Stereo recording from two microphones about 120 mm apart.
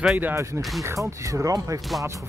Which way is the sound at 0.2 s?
20° right (ahead or behind).